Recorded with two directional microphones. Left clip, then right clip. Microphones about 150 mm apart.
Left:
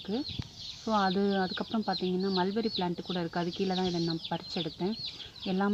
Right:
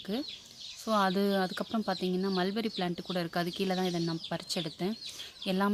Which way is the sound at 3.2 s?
20° right (ahead or behind).